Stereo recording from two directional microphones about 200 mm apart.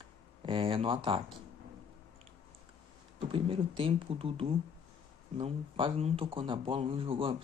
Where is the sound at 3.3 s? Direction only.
25° right (ahead or behind).